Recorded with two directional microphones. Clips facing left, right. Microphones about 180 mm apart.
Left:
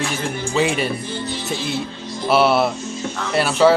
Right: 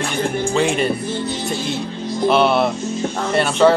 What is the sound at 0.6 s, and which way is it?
Speech, 5° left (ahead or behind).